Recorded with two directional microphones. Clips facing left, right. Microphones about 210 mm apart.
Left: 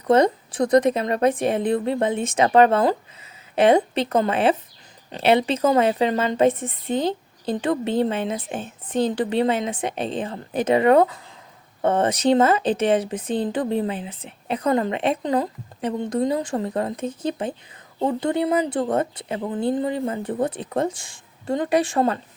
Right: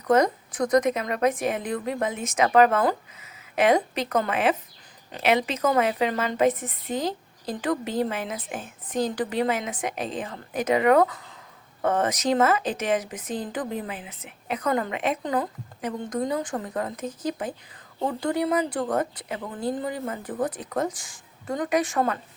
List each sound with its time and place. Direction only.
0.1 s a woman's voice: 30° left (ahead or behind)